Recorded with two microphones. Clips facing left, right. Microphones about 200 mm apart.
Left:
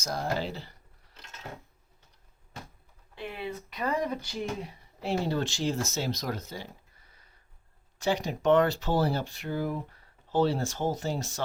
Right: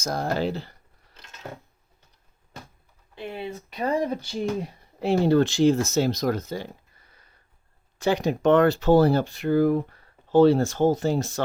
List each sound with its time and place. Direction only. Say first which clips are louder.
0.0 s speech: right 6 dB; 50° right (ahead or behind)
3.2 s speech: right 3 dB; 25° right (ahead or behind)
4.9 s speech: right 10 dB; 60° right (ahead or behind)
7.9 s speech: right 6 dB; 60° right (ahead or behind)